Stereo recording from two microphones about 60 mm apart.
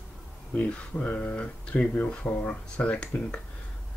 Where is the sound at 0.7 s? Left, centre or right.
Left.